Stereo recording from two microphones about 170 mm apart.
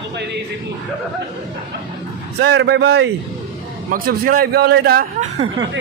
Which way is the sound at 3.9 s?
60° right (ahead or behind).